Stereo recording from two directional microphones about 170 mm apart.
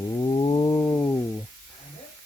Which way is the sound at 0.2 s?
25° left (ahead or behind).